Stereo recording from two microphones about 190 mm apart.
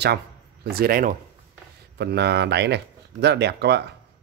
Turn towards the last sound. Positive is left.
turn(degrees=-60)  # may be behind; listen again after turning